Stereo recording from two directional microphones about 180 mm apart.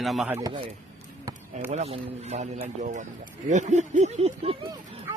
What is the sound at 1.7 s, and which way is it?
Speech, 35° right (ahead or behind).